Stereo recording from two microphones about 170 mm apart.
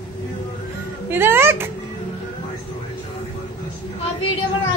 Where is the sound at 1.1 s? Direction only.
15° right (ahead or behind).